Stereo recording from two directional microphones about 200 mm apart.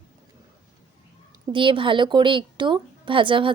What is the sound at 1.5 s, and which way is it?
A woman's voice, 25° right (ahead or behind).